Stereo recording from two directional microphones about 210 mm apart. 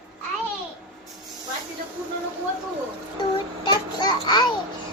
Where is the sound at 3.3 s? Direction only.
20° left (ahead or behind).